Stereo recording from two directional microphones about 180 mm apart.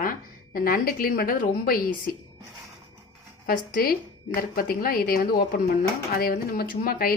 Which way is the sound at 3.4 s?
55° left (ahead or behind).